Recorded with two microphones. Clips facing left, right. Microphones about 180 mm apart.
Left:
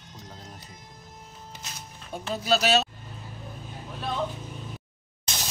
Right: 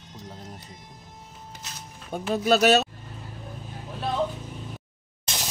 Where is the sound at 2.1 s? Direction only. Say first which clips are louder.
Right 4 dB; 55° right (ahead or behind).